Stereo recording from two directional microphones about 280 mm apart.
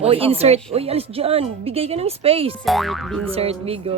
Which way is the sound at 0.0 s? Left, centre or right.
Right.